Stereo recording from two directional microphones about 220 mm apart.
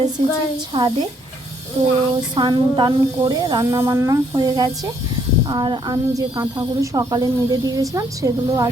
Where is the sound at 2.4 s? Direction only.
20° right (ahead or behind).